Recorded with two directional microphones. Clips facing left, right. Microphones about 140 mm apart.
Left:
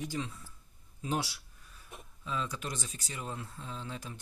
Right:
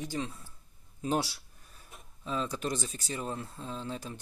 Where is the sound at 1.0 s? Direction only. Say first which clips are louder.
Right 4 dB; 35° right (ahead or behind).